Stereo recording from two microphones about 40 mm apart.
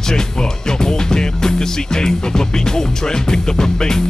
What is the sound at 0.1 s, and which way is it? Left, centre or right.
Speech, centre.